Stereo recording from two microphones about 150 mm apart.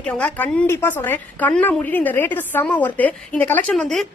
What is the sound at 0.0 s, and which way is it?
A woman's voice, 5° left (ahead or behind).